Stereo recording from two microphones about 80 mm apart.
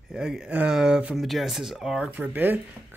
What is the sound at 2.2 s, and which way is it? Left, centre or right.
Speech, right.